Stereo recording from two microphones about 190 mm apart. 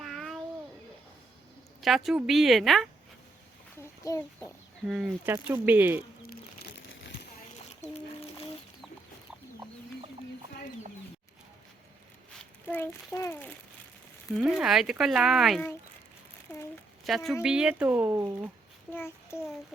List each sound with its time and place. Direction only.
0.0 s a sound: centre (ahead or behind)
1.8 s speech: centre (ahead or behind)
3.8 s a sound: 15° left (ahead or behind)
4.9 s speech: 5° right (ahead or behind)
6.2 s crumpling: 55° left (ahead or behind)
7.7 s a sound: 35° left (ahead or behind)
12.6 s a child's voice: 10° left (ahead or behind)
14.3 s speech: 5° right (ahead or behind)
17.1 s speech: centre (ahead or behind); by 18.5 s 15° right (ahead or behind)
18.9 s a child's voice: 15° left (ahead or behind)